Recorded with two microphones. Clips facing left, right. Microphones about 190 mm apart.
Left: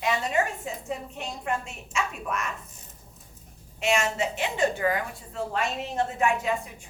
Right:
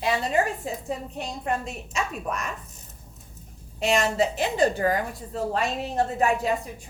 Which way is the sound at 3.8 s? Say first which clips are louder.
Right 3 dB; 35° right (ahead or behind).